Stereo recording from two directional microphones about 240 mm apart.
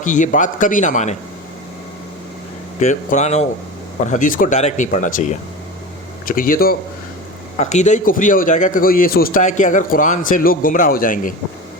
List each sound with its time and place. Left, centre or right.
0.0 s a man's voice: left
2.8 s a man's voice: left